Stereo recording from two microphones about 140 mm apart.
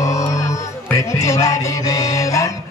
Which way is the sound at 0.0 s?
25° left (ahead or behind).